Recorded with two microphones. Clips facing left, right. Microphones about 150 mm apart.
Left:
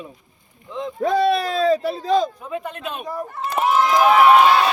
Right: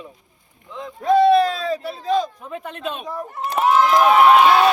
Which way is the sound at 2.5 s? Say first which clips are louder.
Left 1 dB; centre (ahead or behind).